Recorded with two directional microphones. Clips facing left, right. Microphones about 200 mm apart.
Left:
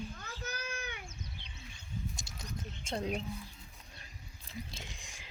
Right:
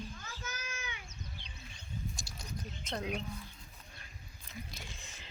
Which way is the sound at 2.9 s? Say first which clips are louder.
Left 2 dB; 30° left (ahead or behind).